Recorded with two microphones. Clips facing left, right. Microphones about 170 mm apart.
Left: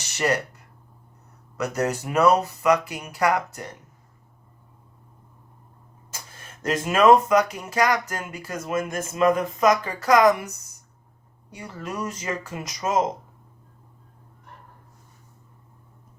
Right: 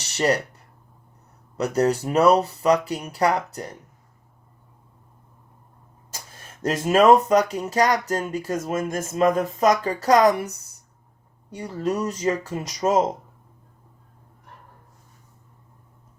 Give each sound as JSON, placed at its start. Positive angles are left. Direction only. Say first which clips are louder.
{"t": 0.0, "sound": "a sound", "louder": "right 3 dB", "side_deg": -30}
{"t": 1.5, "sound": "speech", "louder": "right 4 dB", "side_deg": -30}
{"t": 6.6, "sound": "speech", "louder": "right 2 dB", "side_deg": -35}
{"t": 11.5, "sound": "speech", "louder": "right 7 dB", "side_deg": -30}